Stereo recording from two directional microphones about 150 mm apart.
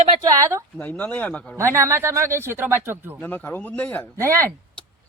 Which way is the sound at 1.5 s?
20° right (ahead or behind).